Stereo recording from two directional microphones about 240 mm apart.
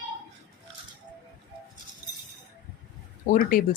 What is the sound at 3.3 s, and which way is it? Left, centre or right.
Speech, left.